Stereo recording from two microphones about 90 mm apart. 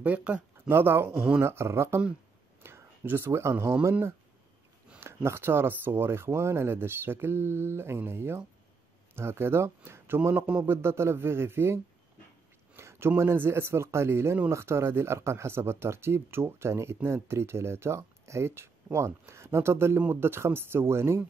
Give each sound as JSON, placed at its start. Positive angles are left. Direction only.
{"t": 0.0, "sound": "speech", "side_deg": -15}
{"t": 0.7, "sound": "speech", "side_deg": -25}
{"t": 5.0, "sound": "speech", "side_deg": -30}
{"t": 12.7, "sound": "a sound", "side_deg": -30}
{"t": 13.2, "sound": "speech", "side_deg": -30}